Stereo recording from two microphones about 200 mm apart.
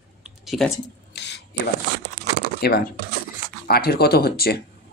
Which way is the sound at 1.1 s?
55° left (ahead or behind).